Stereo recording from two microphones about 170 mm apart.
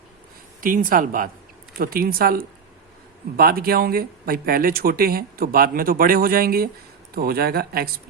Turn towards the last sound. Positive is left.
turn(degrees=-65)  # may be behind; listen again after turning